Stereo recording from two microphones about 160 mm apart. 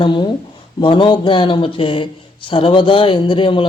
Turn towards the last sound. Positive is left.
turn(degrees=30)  # may be behind; listen again after turning